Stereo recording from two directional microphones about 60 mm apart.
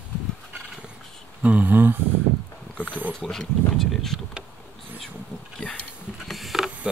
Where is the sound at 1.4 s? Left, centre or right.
Right.